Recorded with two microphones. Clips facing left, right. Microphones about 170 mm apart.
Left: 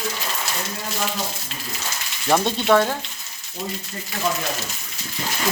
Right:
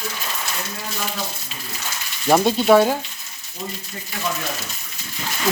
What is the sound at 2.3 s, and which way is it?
Speech, 10° right (ahead or behind).